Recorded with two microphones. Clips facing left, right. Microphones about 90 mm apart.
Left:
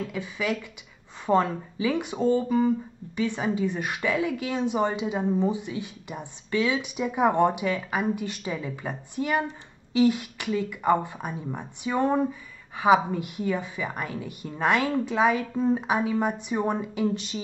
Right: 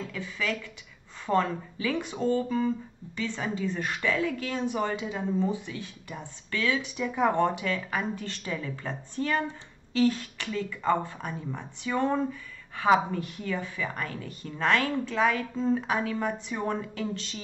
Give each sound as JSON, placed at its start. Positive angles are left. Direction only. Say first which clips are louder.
{"t": 0.0, "sound": "speech", "louder": "left 3 dB", "side_deg": 15}